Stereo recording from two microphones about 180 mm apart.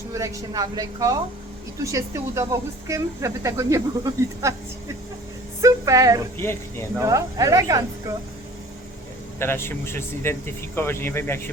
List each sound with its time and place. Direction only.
0.1 s a woman's voice: 20° right (ahead or behind)
5.6 s a woman's voice: 20° right (ahead or behind)
6.3 s speech: 15° left (ahead or behind)
7.0 s speech: 15° right (ahead or behind)
9.4 s speech: 15° left (ahead or behind)